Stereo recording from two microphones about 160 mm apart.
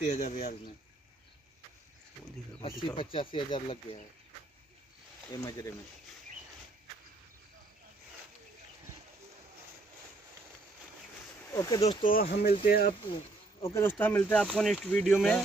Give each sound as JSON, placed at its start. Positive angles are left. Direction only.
{"t": 0.1, "sound": "speech", "side_deg": 45}
{"t": 2.6, "sound": "speech", "side_deg": 35}
{"t": 5.4, "sound": "speech", "side_deg": 20}
{"t": 11.5, "sound": "speech", "side_deg": 20}
{"t": 11.8, "sound": "speech", "side_deg": 30}
{"t": 12.1, "sound": "speech", "side_deg": 70}
{"t": 13.6, "sound": "speech", "side_deg": 15}